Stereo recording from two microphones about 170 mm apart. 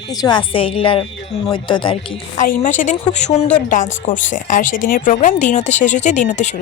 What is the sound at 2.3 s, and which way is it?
Speech, 50° left (ahead or behind).